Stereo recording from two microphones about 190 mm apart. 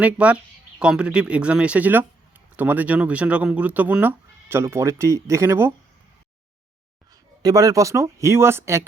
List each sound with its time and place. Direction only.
0.0 s speech: 5° right (ahead or behind)
7.4 s speech: 20° right (ahead or behind)